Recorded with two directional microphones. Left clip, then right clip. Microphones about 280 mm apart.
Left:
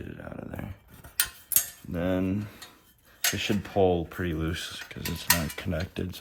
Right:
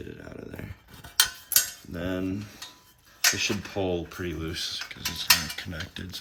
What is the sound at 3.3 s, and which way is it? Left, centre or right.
Mechanisms, left.